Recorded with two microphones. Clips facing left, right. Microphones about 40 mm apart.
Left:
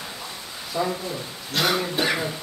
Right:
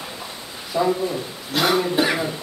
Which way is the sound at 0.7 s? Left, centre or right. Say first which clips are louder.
Right 6 dB; centre.